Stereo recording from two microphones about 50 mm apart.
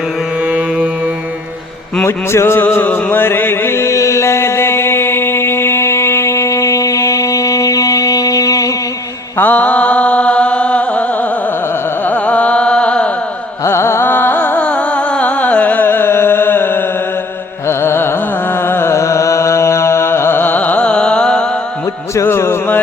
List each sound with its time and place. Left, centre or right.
2.0 s music: left
2.6 s music: left
9.4 s chant: left
12.0 s carnatic music: left
13.7 s carnatic music: left
14.6 s music: left
15.9 s a sound: left
17.7 s carnatic music: left
18.6 s music: left
18.9 s music: left
20.4 s carnatic music: left; by 21.4 s centre
22.1 s music: left